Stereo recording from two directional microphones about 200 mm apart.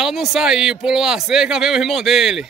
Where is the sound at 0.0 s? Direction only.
Centre (ahead or behind).